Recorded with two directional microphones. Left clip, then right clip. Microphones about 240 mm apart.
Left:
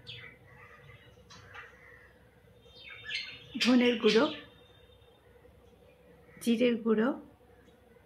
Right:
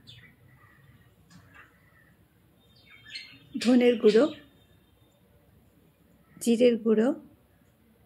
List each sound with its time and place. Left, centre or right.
3.6 s speech: right
6.3 s speech: right